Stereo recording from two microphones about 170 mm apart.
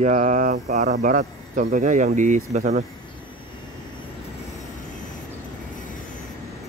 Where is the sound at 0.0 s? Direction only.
45° right (ahead or behind).